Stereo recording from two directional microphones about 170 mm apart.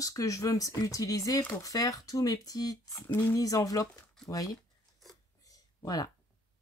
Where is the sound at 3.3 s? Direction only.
20° left (ahead or behind).